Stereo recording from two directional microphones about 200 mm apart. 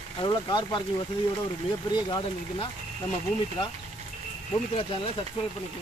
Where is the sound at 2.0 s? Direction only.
20° left (ahead or behind).